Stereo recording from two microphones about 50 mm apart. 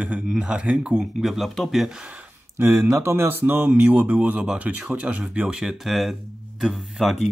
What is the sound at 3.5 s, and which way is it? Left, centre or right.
Speech, right.